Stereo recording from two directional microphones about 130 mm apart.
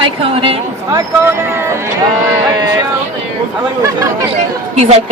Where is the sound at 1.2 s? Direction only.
20° right (ahead or behind).